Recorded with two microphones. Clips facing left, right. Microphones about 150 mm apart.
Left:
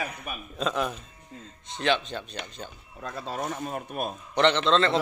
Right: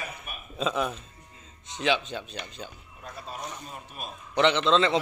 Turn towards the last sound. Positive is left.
turn(degrees=-10)  # may be behind; listen again after turning